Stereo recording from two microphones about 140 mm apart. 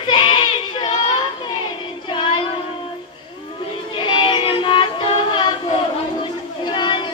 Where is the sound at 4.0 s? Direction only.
35° left (ahead or behind).